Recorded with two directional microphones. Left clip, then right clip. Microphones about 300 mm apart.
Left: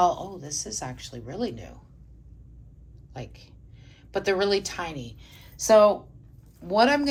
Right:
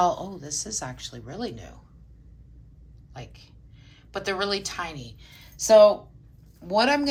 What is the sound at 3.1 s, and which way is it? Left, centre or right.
A woman's voice, centre.